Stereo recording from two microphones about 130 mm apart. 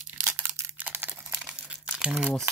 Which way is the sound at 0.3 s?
15° right (ahead or behind).